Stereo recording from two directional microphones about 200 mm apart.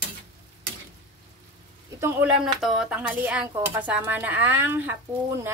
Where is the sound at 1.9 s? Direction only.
10° right (ahead or behind).